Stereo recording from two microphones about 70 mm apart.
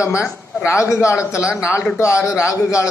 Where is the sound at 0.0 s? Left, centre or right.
Left.